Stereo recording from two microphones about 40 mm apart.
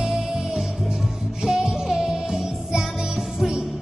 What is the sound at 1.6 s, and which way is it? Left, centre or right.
Music, centre.